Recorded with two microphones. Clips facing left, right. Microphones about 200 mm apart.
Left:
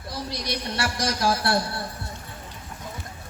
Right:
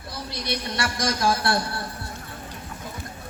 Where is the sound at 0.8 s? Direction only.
30° left (ahead or behind).